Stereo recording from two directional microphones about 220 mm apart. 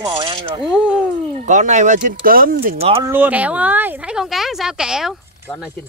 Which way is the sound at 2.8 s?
25° right (ahead or behind).